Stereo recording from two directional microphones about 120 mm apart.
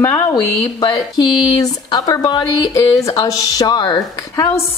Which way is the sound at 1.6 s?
30° left (ahead or behind).